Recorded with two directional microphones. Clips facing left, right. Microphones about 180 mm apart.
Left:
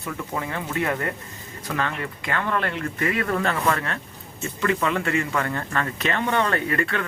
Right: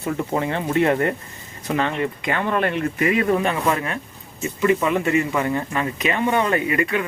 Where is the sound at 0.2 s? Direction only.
25° right (ahead or behind).